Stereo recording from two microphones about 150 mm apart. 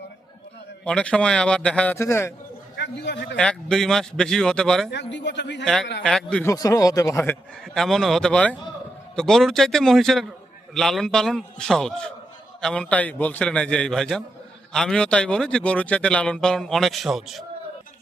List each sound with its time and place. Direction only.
0.9 s a man's voice: 5° left (ahead or behind)
2.0 s a man's voice: 15° left (ahead or behind)
3.3 s a man's voice: 5° left (ahead or behind)
6.4 s speech: 20° left (ahead or behind)
7.7 s a man's voice: centre (ahead or behind)